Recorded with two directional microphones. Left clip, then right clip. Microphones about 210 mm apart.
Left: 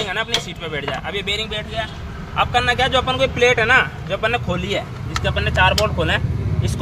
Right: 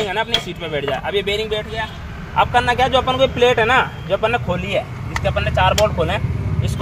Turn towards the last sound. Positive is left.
turn(degrees=-20)  # may be behind; listen again after turning